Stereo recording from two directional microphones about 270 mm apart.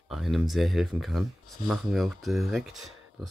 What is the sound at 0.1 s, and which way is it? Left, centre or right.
Speech, centre.